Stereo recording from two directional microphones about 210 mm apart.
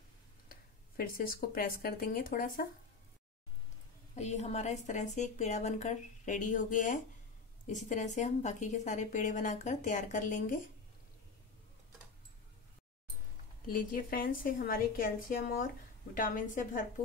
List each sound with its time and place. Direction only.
0.5 s speech: 45° left (ahead or behind)
4.1 s a woman's voice: 30° left (ahead or behind)
13.7 s a woman's voice: 40° left (ahead or behind)